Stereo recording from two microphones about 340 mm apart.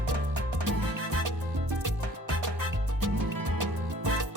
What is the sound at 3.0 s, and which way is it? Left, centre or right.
Music, right.